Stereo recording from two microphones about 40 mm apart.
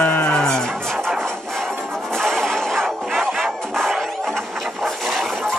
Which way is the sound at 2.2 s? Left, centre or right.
Centre.